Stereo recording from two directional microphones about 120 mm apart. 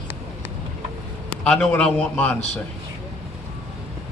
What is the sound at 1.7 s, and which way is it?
Speech, 10° left (ahead or behind).